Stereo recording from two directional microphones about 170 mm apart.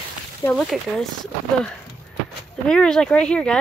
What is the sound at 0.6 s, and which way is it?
Speech, centre (ahead or behind).